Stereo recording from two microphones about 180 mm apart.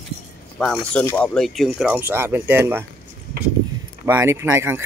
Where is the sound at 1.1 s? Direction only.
5° left (ahead or behind); by 2.9 s 10° right (ahead or behind).